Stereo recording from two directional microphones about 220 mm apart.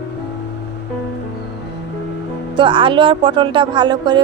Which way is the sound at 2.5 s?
20° right (ahead or behind).